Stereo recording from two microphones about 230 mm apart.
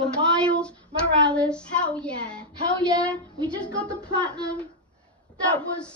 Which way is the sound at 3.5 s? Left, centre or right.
Centre.